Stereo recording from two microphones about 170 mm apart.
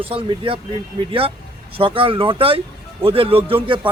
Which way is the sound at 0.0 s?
35° right (ahead or behind).